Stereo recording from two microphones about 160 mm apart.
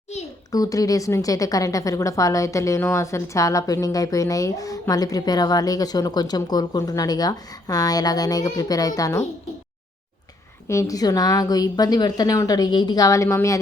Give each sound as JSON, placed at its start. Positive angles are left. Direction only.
{"t": 0.5, "sound": "a woman's voice", "side_deg": 20}
{"t": 10.7, "sound": "a woman's voice", "side_deg": 20}